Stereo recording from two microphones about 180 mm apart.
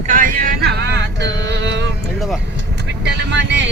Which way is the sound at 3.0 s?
75° right (ahead or behind).